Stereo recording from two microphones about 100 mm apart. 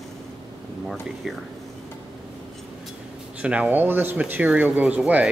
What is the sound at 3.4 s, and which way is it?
Speech, 15° right (ahead or behind).